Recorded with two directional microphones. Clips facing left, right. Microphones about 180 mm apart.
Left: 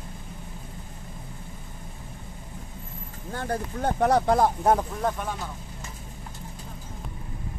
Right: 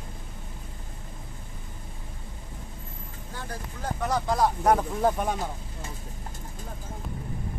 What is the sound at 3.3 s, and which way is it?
Speech, 60° left (ahead or behind).